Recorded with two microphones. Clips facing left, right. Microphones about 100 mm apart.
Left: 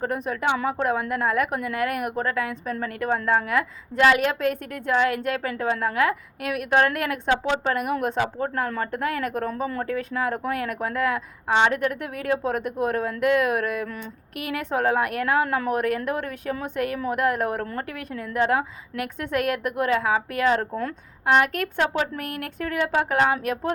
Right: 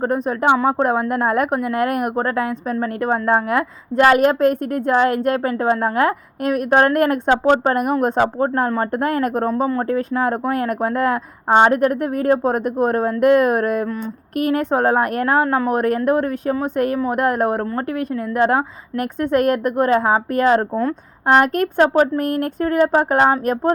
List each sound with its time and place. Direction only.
0.0 s a woman's voice: 40° right (ahead or behind)
9.5 s a woman's voice: 30° right (ahead or behind)